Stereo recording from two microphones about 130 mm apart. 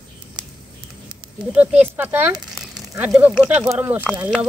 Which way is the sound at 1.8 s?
15° right (ahead or behind).